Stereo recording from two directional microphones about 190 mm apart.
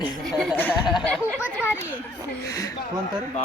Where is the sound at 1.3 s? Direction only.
10° right (ahead or behind).